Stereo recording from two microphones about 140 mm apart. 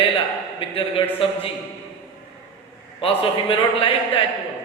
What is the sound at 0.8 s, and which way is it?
Speech, 40° left (ahead or behind).